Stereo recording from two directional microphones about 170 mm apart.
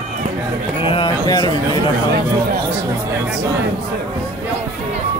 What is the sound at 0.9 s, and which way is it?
Speech, 25° left (ahead or behind).